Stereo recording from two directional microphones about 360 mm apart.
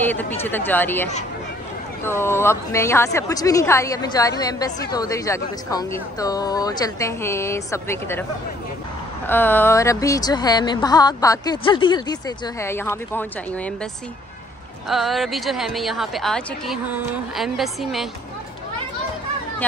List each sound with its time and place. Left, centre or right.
0.0 s a woman's voice: centre
2.0 s a woman's voice: centre
9.3 s a woman's voice: centre
14.9 s a woman's voice: centre